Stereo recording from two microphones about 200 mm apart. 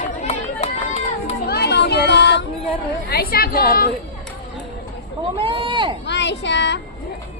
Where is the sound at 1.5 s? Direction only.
55° left (ahead or behind).